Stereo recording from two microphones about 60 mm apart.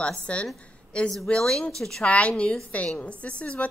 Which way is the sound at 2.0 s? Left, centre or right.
Left.